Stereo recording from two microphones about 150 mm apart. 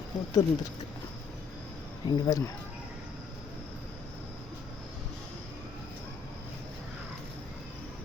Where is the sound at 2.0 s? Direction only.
25° left (ahead or behind).